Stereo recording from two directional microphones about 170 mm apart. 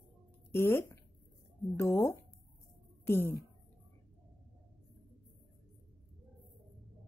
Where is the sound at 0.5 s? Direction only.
15° left (ahead or behind).